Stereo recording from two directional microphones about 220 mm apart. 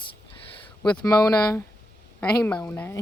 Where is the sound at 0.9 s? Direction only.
15° left (ahead or behind).